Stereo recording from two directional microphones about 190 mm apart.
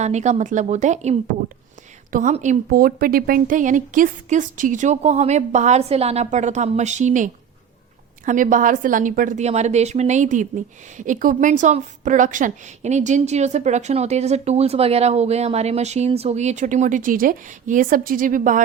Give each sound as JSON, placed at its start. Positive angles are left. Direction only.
{"t": 0.0, "sound": "a woman's voice", "side_deg": -35}